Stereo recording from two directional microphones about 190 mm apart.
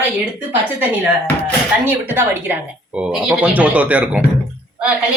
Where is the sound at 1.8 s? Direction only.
10° right (ahead or behind).